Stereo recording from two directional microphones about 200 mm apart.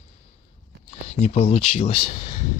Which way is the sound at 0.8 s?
30° left (ahead or behind).